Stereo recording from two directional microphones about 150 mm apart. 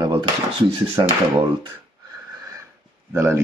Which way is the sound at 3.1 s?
15° right (ahead or behind).